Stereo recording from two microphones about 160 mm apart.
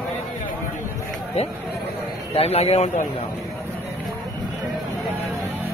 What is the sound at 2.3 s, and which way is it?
Speech, 40° left (ahead or behind).